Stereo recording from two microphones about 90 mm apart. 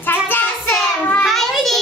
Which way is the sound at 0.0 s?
20° left (ahead or behind).